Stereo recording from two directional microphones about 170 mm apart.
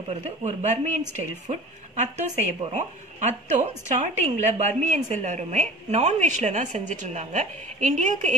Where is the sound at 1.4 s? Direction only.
45° right (ahead or behind).